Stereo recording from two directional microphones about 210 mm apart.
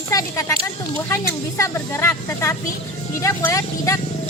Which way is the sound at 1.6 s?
10° left (ahead or behind).